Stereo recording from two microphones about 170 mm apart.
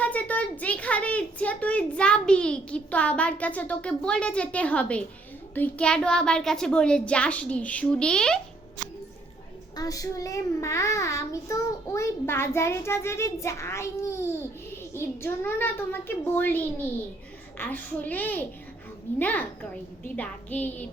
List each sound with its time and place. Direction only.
0.0 s a child's voice: 10° left (ahead or behind)
9.7 s a child's voice: 20° left (ahead or behind)